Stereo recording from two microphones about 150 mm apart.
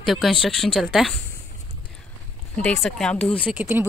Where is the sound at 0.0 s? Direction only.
Centre (ahead or behind).